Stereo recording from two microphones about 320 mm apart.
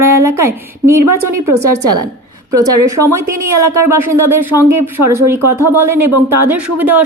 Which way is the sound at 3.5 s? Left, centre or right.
Right.